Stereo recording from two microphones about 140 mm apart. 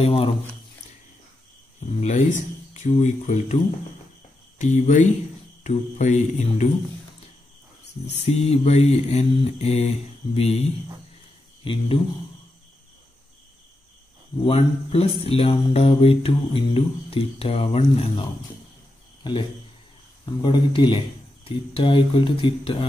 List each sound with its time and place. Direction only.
0.0 s mantra: 40° left (ahead or behind)
1.8 s speech: 55° left (ahead or behind)
4.6 s speech: 55° left (ahead or behind)
5.6 s mantra: 55° left (ahead or behind)
8.3 s mantra: 50° left (ahead or behind)
11.6 s speech: 40° left (ahead or behind)
14.4 s mantra: 45° left (ahead or behind)
20.2 s speech: 35° left (ahead or behind)